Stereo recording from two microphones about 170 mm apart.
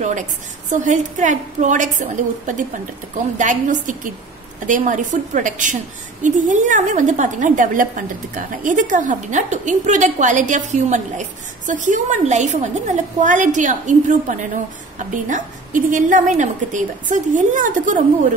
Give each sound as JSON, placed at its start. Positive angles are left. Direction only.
{"t": 0.8, "sound": "a woman's voice", "side_deg": -45}
{"t": 15.1, "sound": "a woman's voice", "side_deg": -50}